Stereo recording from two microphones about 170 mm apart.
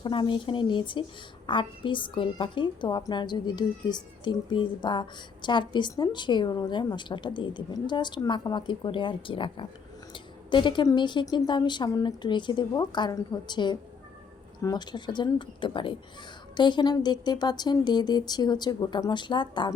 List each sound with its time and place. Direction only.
0.0 s a woman's voice: 30° left (ahead or behind)